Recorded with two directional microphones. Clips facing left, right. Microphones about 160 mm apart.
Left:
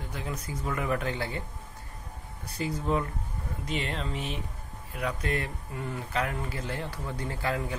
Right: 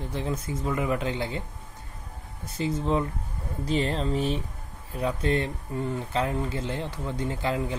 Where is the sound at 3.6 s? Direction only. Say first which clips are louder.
Right 7 dB; 35° right (ahead or behind).